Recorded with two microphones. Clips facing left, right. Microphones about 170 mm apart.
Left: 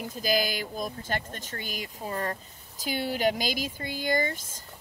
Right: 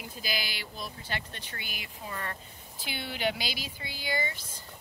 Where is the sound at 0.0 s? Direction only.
45° left (ahead or behind).